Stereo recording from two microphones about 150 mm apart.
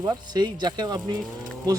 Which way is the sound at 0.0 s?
30° right (ahead or behind).